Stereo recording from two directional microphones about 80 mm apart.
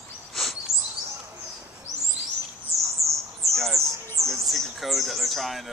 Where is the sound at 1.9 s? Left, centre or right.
Right.